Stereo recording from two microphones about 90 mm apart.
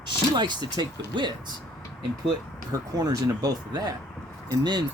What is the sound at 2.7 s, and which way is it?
Speech, 45° right (ahead or behind).